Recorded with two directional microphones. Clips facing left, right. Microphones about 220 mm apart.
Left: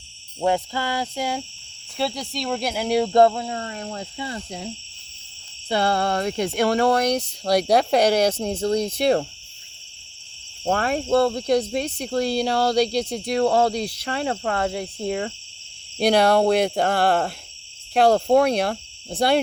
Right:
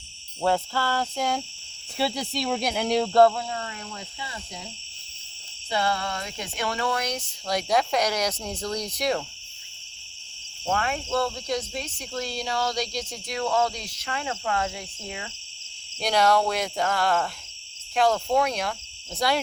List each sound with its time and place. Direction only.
0.4 s cricket: 15° left (ahead or behind)
2.0 s speech: centre (ahead or behind); by 3.4 s 20° left (ahead or behind)
3.5 s speech: 35° left (ahead or behind)
5.6 s speech: 60° left (ahead or behind)
6.8 s speech: 40° left (ahead or behind)
10.7 s speech: 40° left (ahead or behind)
11.3 s speech: 60° left (ahead or behind)
13.3 s speech: 35° left (ahead or behind)
16.0 s speech: 60° left (ahead or behind)
19.1 s speech: 30° left (ahead or behind)